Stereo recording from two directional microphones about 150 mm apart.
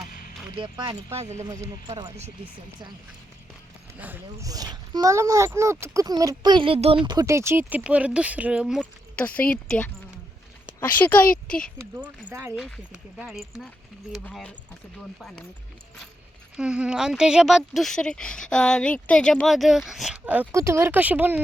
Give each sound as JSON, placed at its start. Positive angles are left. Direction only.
{"t": 0.5, "sound": "speech", "side_deg": -35}
{"t": 1.1, "sound": "speech", "side_deg": -50}
{"t": 1.5, "sound": "speech", "side_deg": -20}
{"t": 3.9, "sound": "speech", "side_deg": -10}
{"t": 4.4, "sound": "speech", "side_deg": -25}
{"t": 8.8, "sound": "speech", "side_deg": 10}
{"t": 11.9, "sound": "speech", "side_deg": -15}
{"t": 12.5, "sound": "speech", "side_deg": 0}
{"t": 16.6, "sound": "speech", "side_deg": -5}